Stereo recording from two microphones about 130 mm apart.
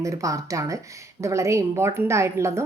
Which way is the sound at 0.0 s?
25° right (ahead or behind).